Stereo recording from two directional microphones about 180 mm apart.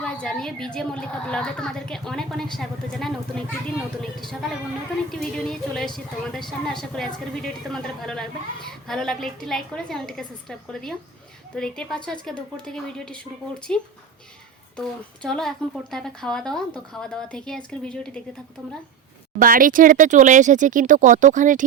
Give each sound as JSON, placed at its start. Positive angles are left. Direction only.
{"t": 0.0, "sound": "a woman's voice", "side_deg": 5}
{"t": 4.2, "sound": "a woman's voice", "side_deg": 0}
{"t": 19.4, "sound": "speech", "side_deg": -50}